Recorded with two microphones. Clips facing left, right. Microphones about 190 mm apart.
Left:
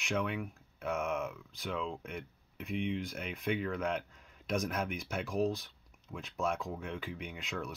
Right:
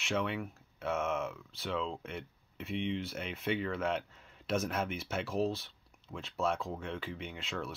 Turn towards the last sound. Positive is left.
turn(degrees=0)  # may be behind; listen again after turning